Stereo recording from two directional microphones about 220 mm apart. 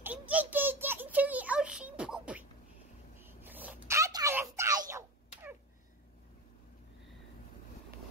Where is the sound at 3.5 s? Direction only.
10° right (ahead or behind).